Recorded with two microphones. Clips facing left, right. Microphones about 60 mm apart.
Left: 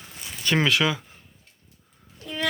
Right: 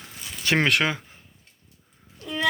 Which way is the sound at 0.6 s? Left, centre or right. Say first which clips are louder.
Left 1 dB; right.